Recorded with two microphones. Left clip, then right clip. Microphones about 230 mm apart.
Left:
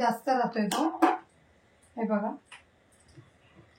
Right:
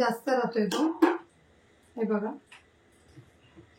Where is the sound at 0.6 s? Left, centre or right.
Centre.